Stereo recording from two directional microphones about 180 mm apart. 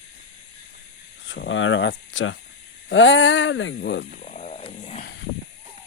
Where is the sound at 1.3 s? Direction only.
90° left; by 4.0 s 70° left (ahead or behind).